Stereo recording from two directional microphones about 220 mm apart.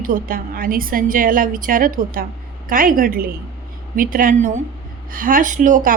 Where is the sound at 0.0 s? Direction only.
40° right (ahead or behind).